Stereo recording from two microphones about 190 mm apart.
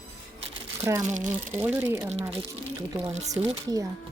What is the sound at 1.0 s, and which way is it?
Speech, 40° right (ahead or behind).